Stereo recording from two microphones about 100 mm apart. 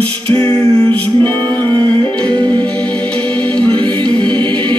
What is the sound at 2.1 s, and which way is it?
Music, 10° left (ahead or behind).